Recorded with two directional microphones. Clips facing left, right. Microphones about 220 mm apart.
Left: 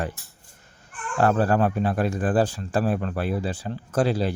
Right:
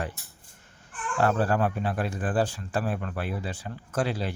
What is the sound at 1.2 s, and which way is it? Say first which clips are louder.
Speech: left 4 dB; 45° left (ahead or behind).